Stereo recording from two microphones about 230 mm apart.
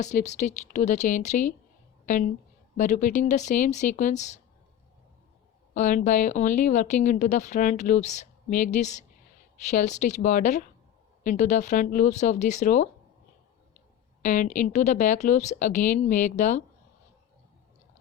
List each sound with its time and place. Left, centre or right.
0.0 s a woman's voice: left
5.7 s a woman's voice: left
14.2 s a woman's voice: left